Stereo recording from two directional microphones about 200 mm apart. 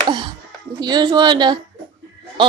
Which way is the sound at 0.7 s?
20° right (ahead or behind).